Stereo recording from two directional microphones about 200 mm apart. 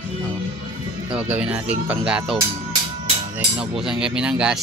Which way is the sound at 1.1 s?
5° right (ahead or behind).